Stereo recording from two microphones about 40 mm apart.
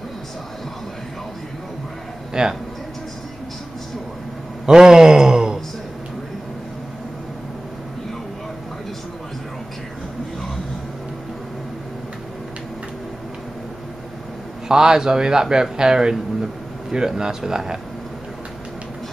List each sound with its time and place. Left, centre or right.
2.3 s speech: centre
4.6 s a sound: centre
14.7 s a man's voice: centre